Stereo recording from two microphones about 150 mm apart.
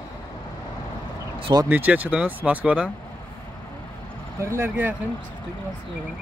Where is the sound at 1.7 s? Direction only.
10° right (ahead or behind).